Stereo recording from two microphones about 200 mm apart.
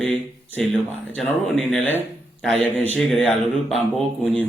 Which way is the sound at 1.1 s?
Centre (ahead or behind).